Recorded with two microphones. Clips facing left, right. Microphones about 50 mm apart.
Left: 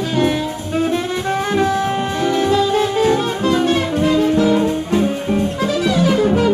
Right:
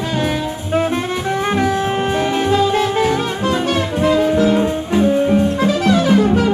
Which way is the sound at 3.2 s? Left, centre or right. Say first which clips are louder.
Left 2 dB; right.